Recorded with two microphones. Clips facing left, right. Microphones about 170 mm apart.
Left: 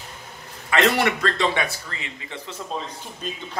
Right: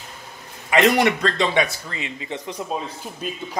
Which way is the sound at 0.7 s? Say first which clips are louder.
Right 3 dB; 15° right (ahead or behind).